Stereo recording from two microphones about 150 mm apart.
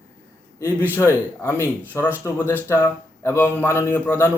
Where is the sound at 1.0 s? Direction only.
15° left (ahead or behind).